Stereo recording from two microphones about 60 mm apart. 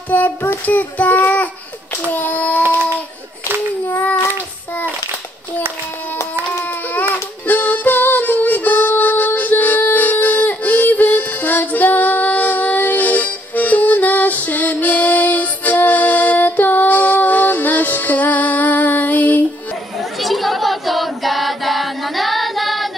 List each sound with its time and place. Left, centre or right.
0.1 s child singing: left
3.8 s child singing: left
7.4 s music: left
20.2 s choir: centre